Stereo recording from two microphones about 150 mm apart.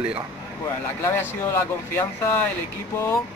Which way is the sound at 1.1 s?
15° left (ahead or behind).